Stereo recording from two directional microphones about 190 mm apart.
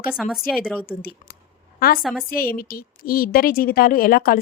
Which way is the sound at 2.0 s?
Centre (ahead or behind).